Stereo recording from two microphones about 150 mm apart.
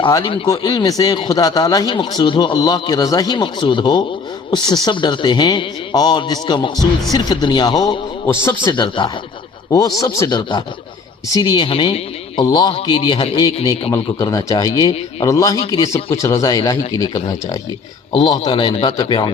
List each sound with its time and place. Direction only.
0.0 s speech: 30° left (ahead or behind)